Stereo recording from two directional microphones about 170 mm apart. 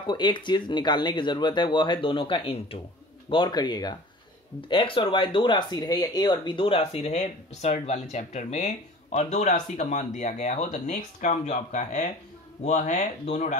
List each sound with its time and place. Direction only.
0.0 s speech: 25° left (ahead or behind); by 13.6 s 45° left (ahead or behind)